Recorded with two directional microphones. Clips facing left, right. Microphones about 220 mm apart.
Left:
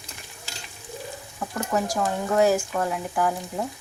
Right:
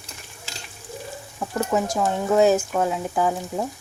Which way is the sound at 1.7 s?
20° right (ahead or behind).